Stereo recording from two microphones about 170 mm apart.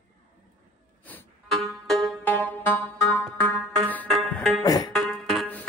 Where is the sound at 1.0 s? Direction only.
5° left (ahead or behind).